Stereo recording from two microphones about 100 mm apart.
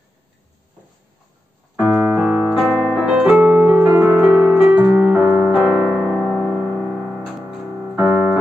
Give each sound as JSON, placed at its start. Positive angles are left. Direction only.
{"t": 2.0, "sound": "piano", "side_deg": -5}
{"t": 4.2, "sound": "music", "side_deg": -5}
{"t": 5.2, "sound": "music", "side_deg": -20}
{"t": 5.5, "sound": "piano", "side_deg": -5}
{"t": 7.9, "sound": "keyboard", "side_deg": -20}